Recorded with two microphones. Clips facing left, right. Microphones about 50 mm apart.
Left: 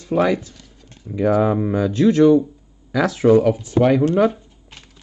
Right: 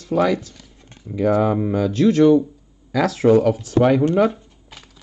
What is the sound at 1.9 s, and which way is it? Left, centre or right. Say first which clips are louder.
Speech: left 1 dB; left.